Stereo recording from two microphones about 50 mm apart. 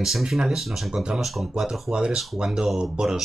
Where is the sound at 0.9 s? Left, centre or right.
Centre.